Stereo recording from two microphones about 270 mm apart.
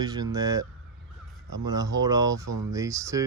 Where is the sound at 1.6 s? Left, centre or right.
Centre.